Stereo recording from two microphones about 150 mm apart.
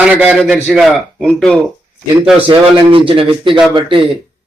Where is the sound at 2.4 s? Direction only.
35° right (ahead or behind).